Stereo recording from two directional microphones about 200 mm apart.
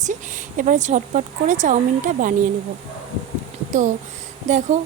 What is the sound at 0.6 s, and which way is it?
A woman's voice, 40° right (ahead or behind).